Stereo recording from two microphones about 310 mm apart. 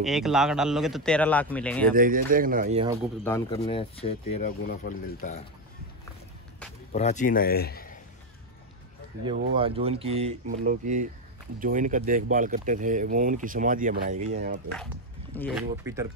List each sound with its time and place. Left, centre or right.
0.0 s a man's voice: centre
2.0 s speech: right
3.3 s speech: centre
6.9 s a man's voice: left
9.2 s speech: centre
15.3 s a man's voice: centre
15.8 s speech: centre